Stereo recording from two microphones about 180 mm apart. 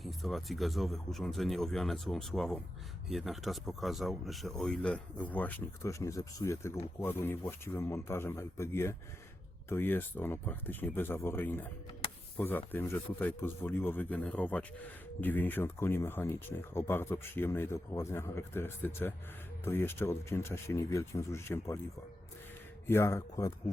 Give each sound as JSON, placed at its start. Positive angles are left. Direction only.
{"t": 0.0, "sound": "speech", "side_deg": 0}
{"t": 22.9, "sound": "speech", "side_deg": 15}